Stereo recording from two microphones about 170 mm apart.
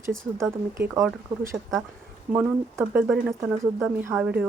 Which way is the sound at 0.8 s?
15° right (ahead or behind).